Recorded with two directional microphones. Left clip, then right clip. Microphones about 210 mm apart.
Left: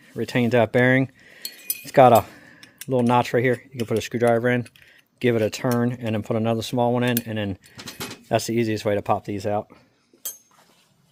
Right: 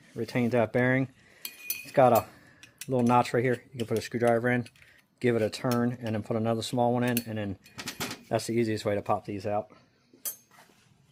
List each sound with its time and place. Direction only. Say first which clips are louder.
0.2 s speech: left 7 dB; 40° left (ahead or behind)
1.8 s speech: left 8 dB; 55° left (ahead or behind)
2.9 s speech: left 5 dB; 35° left (ahead or behind); by 9.6 s 55° left (ahead or behind)